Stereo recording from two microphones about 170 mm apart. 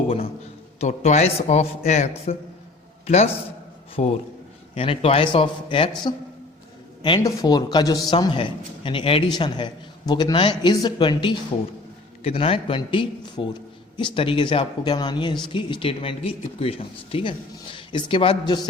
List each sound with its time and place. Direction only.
0.8 s a man's voice: 40° left (ahead or behind); by 18.7 s 25° left (ahead or behind)